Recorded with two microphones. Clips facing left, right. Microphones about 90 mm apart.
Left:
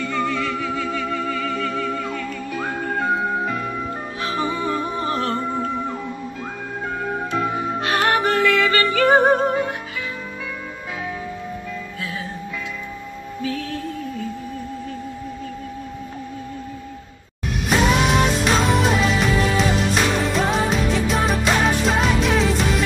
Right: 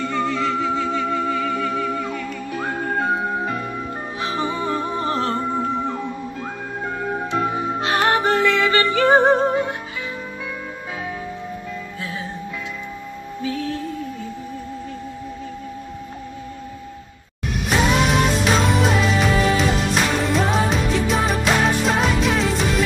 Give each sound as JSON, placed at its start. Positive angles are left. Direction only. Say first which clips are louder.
{"t": 0.0, "sound": "music", "louder": "right 1 dB", "side_deg": -25}
{"t": 2.0, "sound": "music", "louder": "even", "side_deg": -5}
{"t": 4.2, "sound": "music", "louder": "even", "side_deg": -20}
{"t": 5.3, "sound": "music", "louder": "right 1 dB", "side_deg": -10}
{"t": 7.2, "sound": "music", "louder": "right 1 dB", "side_deg": -20}
{"t": 12.0, "sound": "music", "louder": "even", "side_deg": -25}
{"t": 13.4, "sound": "music", "louder": "right 1 dB", "side_deg": -25}
{"t": 17.6, "sound": "music", "louder": "even", "side_deg": 0}